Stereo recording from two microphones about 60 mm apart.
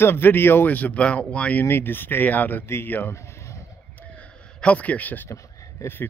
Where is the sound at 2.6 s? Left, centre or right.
Left.